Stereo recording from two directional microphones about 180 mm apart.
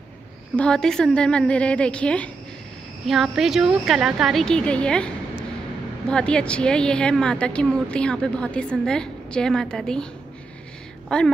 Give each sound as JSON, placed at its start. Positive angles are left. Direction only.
{"t": 0.6, "sound": "a woman's voice", "side_deg": 5}
{"t": 11.1, "sound": "a woman's voice", "side_deg": 5}